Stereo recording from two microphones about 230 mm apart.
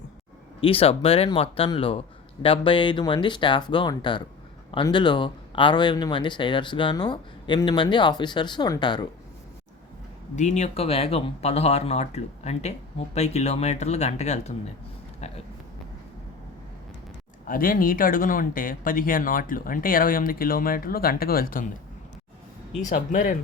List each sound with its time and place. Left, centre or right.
0.6 s speech: left
10.3 s speech: left
15.2 s a sound: left
17.4 s speech: left
22.9 s speech: left